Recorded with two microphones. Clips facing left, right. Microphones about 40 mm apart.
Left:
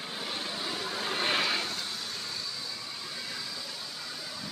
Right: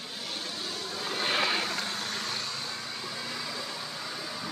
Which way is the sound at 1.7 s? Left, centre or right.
Right.